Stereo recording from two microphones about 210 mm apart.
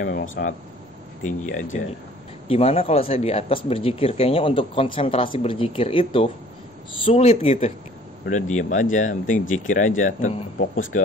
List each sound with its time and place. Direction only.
0.0 s speech: 40° left (ahead or behind)